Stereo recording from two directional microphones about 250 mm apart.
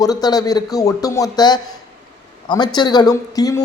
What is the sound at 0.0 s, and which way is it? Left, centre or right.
A man's voice, centre.